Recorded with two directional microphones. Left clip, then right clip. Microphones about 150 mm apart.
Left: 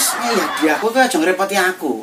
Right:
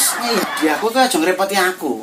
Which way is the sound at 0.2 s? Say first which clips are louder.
Left 2 dB; 10° right (ahead or behind).